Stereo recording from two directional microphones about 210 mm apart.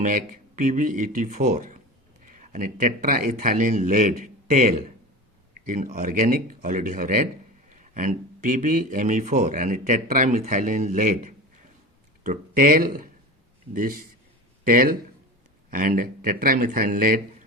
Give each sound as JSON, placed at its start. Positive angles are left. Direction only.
{"t": 0.0, "sound": "speech", "side_deg": -40}